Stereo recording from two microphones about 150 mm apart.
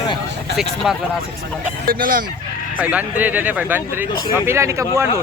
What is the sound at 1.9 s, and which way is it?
Speech, 70° right (ahead or behind).